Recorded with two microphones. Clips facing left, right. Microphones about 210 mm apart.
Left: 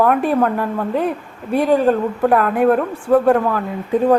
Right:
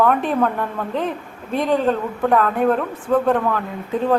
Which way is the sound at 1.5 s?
10° left (ahead or behind).